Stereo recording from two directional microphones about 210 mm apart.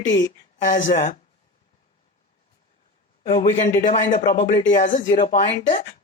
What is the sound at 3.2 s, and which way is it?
Speech, 25° left (ahead or behind).